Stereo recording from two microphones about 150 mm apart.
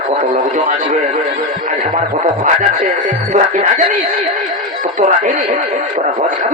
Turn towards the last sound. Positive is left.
turn(degrees=-55)  # may be behind; listen again after turning